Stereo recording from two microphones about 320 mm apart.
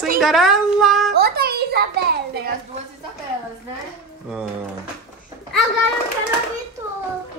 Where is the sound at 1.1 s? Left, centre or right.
Right.